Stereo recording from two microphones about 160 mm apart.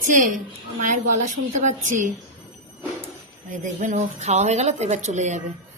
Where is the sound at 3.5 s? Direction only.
50° right (ahead or behind).